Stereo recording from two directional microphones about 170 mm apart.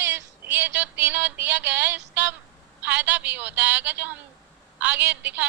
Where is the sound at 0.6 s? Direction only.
90° right.